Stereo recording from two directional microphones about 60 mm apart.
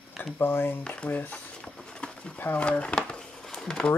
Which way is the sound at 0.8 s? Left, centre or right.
Centre.